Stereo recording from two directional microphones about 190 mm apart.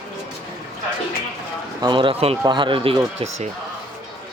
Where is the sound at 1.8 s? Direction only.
25° right (ahead or behind).